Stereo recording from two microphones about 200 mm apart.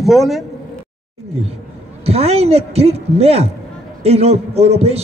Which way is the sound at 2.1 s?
30° right (ahead or behind).